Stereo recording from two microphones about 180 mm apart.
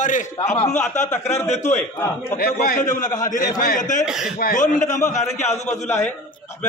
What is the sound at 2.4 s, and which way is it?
A man's voice, 50° left (ahead or behind).